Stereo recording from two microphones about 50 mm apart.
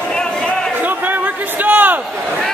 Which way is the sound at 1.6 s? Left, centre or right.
Right.